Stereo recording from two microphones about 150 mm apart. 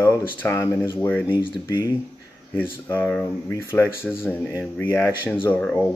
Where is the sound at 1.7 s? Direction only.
25° left (ahead or behind).